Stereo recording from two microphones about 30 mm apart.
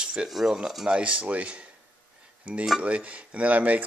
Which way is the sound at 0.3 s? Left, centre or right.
Centre.